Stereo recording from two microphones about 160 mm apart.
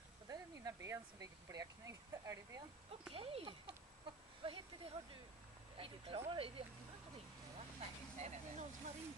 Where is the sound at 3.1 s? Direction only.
35° right (ahead or behind).